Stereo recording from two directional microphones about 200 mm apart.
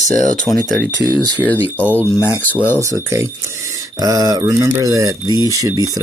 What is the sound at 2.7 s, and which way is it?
Speech, 15° right (ahead or behind).